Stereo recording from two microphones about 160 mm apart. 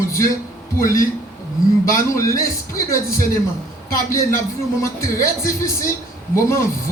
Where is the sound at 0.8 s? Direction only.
60° left (ahead or behind).